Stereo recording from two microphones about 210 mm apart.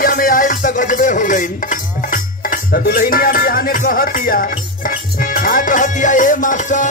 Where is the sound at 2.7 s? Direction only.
45° left (ahead or behind).